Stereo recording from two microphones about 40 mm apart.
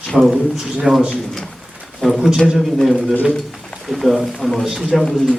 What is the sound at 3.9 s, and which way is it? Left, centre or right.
Speech, centre.